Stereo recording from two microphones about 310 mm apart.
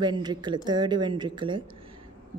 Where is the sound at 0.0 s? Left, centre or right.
Centre.